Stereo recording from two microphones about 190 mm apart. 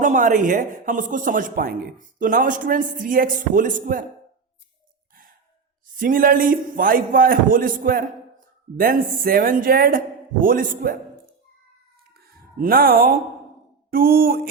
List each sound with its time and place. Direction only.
0.0 s a man's voice: 45° right (ahead or behind)
6.0 s a man's voice: 45° right (ahead or behind)
12.1 s a sound: 50° right (ahead or behind)
13.9 s a man's voice: 50° right (ahead or behind)